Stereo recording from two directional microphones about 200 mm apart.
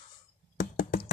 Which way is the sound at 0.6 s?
45° left (ahead or behind).